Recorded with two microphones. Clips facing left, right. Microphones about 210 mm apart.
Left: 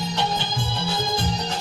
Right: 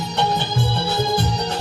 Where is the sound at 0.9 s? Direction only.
65° right (ahead or behind).